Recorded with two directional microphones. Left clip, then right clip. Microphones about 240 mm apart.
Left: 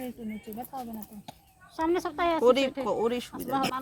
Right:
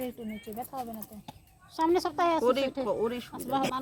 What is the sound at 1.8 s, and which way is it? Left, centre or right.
Speech, centre.